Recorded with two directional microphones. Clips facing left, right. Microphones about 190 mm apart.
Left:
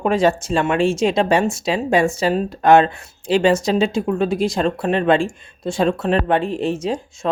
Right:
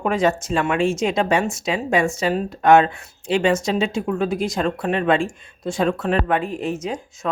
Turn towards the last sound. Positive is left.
turn(degrees=30)  # may be behind; listen again after turning